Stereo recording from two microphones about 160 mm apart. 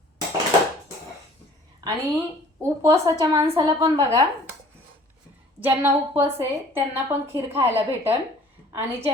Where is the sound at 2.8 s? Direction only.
20° right (ahead or behind).